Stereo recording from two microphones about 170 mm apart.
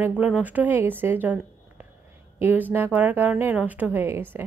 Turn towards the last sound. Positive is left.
turn(degrees=-15)  # may be behind; listen again after turning